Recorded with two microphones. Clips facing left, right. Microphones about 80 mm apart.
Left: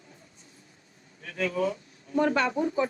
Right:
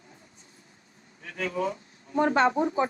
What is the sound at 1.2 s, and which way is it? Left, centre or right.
Speech, right.